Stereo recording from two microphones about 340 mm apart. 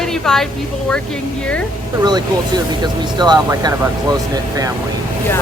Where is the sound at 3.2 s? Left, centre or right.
Centre.